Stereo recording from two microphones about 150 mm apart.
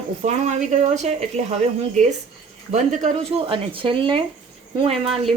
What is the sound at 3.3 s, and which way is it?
Speech, 40° right (ahead or behind).